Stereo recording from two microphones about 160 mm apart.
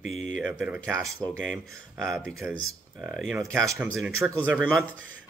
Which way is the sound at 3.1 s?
Centre (ahead or behind).